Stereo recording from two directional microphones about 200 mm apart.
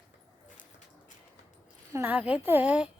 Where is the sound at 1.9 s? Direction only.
10° right (ahead or behind).